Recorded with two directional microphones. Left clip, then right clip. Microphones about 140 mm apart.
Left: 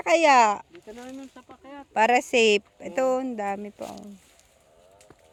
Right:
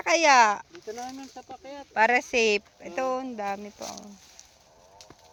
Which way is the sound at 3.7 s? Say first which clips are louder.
Left 1 dB; 55° left (ahead or behind).